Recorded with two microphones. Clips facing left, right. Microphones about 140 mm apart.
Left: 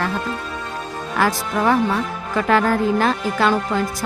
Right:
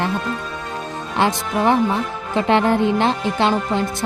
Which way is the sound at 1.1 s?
25° right (ahead or behind).